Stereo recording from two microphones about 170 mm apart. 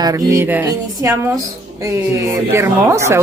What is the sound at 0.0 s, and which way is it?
Speech, 15° right (ahead or behind).